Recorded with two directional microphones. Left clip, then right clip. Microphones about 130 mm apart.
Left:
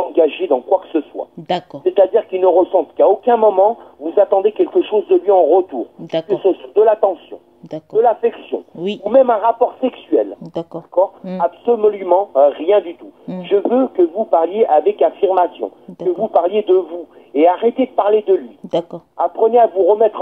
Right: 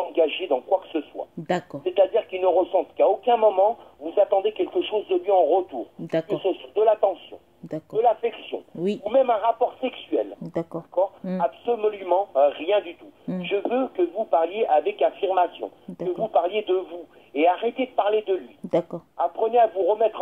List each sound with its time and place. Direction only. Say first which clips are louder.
0.0 s speech: left 8 dB; 40° left (ahead or behind)
6.4 s radio: left 9 dB; 40° left (ahead or behind)
8.0 s a sound: left 7 dB; 40° left (ahead or behind)
9.0 s speech: left 9 dB; 35° left (ahead or behind)
10.4 s a sound: left 4 dB; 5° right (ahead or behind)
11.4 s speech: left 9 dB; 40° left (ahead or behind)
18.7 s speech: left 4 dB; 5° right (ahead or behind)
19.1 s a man's voice: left 8 dB; 40° left (ahead or behind)